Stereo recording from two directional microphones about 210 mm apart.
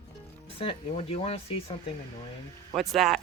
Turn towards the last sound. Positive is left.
turn(degrees=0)  # may be behind; listen again after turning